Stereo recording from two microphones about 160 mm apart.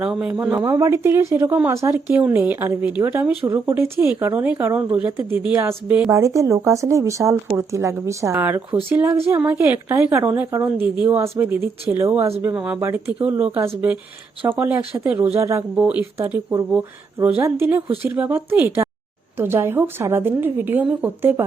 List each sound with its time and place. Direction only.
0.0 s speech: 5° right (ahead or behind)
0.5 s speech: 20° right (ahead or behind)